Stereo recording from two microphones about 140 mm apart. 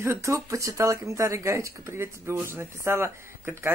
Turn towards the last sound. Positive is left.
turn(degrees=-15)  # may be behind; listen again after turning